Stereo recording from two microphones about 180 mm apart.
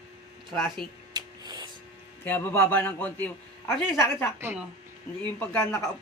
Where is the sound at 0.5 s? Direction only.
Centre (ahead or behind).